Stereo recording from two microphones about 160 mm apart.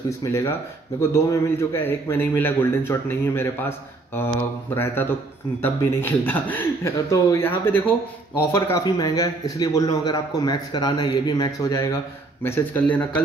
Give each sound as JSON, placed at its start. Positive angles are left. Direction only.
{"t": 0.2, "sound": "a man's voice", "side_deg": 20}